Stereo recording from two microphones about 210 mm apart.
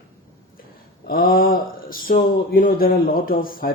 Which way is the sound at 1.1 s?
45° left (ahead or behind).